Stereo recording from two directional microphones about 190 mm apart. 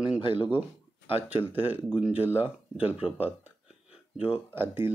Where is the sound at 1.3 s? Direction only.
10° right (ahead or behind).